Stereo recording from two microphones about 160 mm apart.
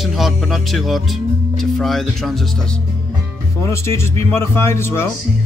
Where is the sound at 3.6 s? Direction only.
15° left (ahead or behind).